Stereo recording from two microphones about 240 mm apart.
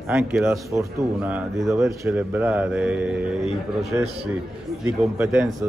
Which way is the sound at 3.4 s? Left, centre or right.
Right.